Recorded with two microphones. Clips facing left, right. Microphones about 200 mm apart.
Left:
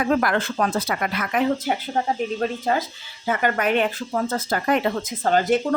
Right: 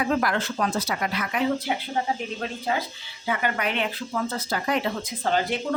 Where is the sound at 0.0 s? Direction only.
55° left (ahead or behind).